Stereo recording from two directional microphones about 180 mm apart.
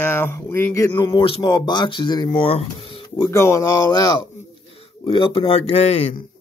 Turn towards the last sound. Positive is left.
turn(degrees=35)  # may be behind; listen again after turning